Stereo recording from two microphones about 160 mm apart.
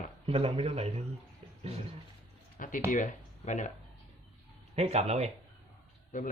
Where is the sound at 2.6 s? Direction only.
55° left (ahead or behind).